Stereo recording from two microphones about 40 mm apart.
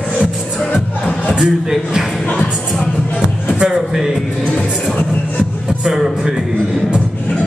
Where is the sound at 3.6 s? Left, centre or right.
Centre.